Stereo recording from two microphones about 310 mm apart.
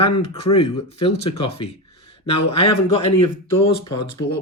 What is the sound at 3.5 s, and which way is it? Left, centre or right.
Speech, left.